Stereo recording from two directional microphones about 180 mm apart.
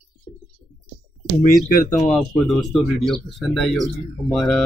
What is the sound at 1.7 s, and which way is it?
Speech, 45° left (ahead or behind).